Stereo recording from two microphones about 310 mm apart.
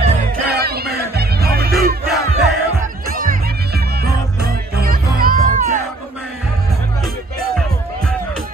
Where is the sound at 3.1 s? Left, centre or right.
Right.